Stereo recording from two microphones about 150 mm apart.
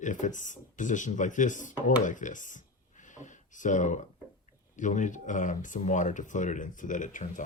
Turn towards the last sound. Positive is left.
turn(degrees=60)  # may be behind; listen again after turning